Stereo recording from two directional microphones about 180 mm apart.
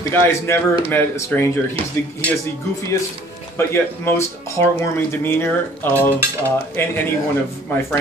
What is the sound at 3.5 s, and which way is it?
Speech, 15° left (ahead or behind).